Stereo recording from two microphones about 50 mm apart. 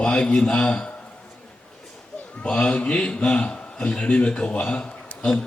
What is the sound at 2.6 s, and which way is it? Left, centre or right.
A man's voice, left.